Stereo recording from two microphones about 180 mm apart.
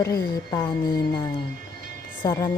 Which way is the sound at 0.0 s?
20° left (ahead or behind).